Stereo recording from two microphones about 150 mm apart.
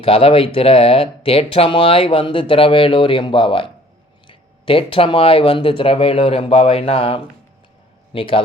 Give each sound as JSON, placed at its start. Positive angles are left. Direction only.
{"t": 0.0, "sound": "speech", "side_deg": 40}